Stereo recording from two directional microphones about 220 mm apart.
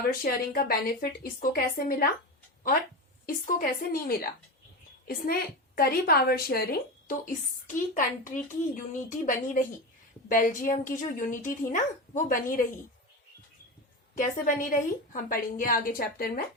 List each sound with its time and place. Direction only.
0.0 s speech: 40° left (ahead or behind)
3.2 s a woman's voice: 40° left (ahead or behind)
14.2 s speech: 40° left (ahead or behind)